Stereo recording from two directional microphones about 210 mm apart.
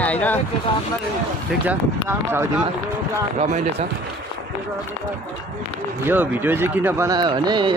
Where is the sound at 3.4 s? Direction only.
35° right (ahead or behind).